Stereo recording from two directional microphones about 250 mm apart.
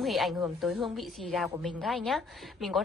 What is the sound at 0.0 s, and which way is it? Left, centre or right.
A woman's voice, centre.